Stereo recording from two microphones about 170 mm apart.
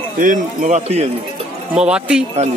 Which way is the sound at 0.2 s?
50° right (ahead or behind).